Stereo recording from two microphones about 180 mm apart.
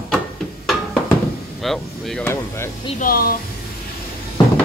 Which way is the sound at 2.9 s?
55° left (ahead or behind).